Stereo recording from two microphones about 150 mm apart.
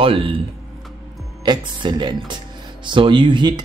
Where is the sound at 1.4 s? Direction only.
30° right (ahead or behind).